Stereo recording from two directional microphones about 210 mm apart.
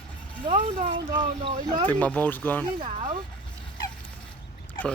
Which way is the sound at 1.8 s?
5° left (ahead or behind).